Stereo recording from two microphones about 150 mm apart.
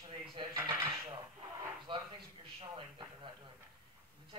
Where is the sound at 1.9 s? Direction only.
35° right (ahead or behind).